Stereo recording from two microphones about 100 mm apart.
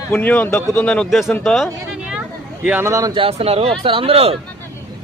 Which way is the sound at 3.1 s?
75° right (ahead or behind).